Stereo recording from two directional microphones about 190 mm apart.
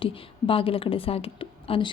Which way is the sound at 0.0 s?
30° left (ahead or behind).